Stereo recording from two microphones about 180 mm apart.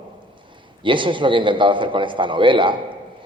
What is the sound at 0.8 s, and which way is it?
A man's voice, 25° right (ahead or behind).